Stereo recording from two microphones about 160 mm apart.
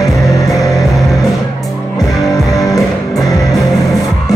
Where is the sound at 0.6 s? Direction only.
20° left (ahead or behind).